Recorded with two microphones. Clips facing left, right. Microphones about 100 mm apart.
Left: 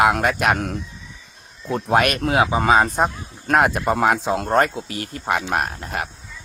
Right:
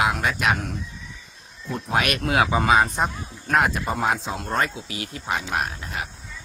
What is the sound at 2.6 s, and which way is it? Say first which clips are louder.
Speech: left 3 dB; 40° left (ahead or behind).